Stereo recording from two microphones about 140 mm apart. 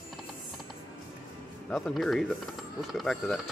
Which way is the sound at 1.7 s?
5° left (ahead or behind).